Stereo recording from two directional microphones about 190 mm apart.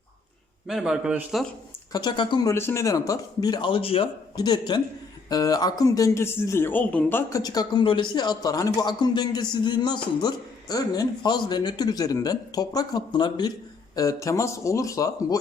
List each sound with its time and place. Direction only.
0.7 s speech: centre (ahead or behind)
1.9 s a man's voice: 20° left (ahead or behind)